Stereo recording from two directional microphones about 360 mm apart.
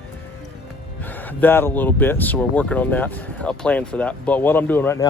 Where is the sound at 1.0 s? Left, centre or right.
Centre.